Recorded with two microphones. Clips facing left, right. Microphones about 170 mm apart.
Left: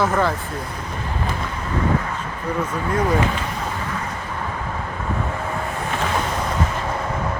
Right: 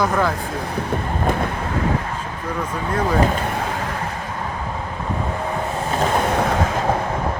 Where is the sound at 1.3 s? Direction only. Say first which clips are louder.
Right 10 dB; 55° right (ahead or behind).